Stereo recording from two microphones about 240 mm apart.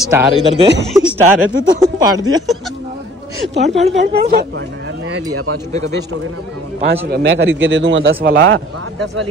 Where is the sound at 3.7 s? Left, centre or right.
Centre.